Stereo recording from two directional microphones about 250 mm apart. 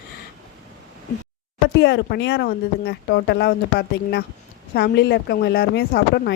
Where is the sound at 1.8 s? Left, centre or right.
Left.